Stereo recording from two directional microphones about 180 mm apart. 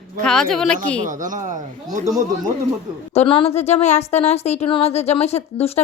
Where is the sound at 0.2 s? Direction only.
5° left (ahead or behind).